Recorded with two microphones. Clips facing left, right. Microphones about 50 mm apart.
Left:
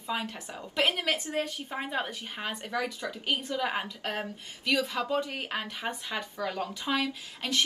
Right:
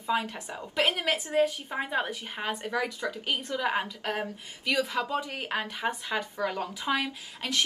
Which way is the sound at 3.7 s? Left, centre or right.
Centre.